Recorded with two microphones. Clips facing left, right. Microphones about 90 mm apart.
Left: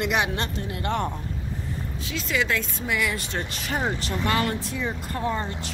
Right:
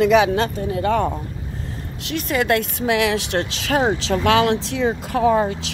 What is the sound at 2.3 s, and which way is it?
Speech, 55° right (ahead or behind).